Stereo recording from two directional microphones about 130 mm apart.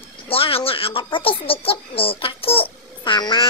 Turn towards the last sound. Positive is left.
turn(degrees=35)  # may be behind; listen again after turning